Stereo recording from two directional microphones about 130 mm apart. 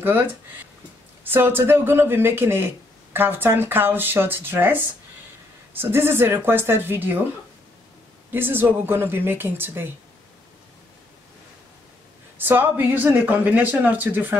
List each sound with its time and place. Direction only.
0.0 s speech: 15° right (ahead or behind)
8.3 s speech: 15° right (ahead or behind)
12.4 s speech: 15° right (ahead or behind)